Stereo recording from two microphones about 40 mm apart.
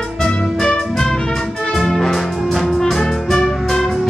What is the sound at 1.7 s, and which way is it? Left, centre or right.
Brass instrument, centre.